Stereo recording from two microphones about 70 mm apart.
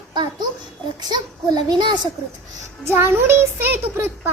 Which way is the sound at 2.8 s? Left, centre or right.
Right.